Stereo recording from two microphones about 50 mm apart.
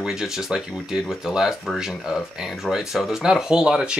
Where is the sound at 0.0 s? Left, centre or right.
Centre.